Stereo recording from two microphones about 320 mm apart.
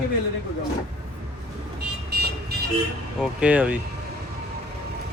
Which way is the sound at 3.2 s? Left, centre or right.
Centre.